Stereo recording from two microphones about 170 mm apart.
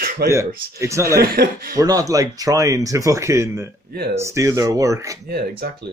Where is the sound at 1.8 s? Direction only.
20° right (ahead or behind).